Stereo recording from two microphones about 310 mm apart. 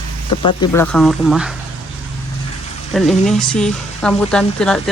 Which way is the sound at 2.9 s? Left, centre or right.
Centre.